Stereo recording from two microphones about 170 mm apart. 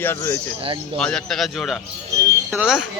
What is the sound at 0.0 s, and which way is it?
Speech, 15° left (ahead or behind).